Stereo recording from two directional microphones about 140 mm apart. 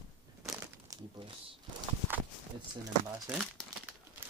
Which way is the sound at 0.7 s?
25° right (ahead or behind).